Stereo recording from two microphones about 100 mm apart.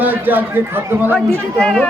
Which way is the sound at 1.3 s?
10° left (ahead or behind).